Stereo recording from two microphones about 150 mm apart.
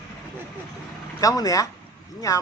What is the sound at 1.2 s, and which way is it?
Speech, 20° left (ahead or behind).